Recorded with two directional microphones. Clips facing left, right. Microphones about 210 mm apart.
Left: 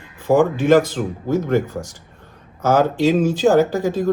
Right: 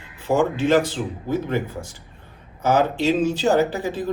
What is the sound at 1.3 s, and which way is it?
Speech, 45° left (ahead or behind).